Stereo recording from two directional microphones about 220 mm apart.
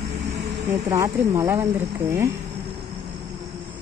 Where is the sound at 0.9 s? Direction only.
15° right (ahead or behind).